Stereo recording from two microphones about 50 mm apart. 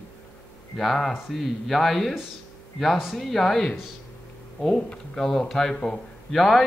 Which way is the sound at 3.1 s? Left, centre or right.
Centre.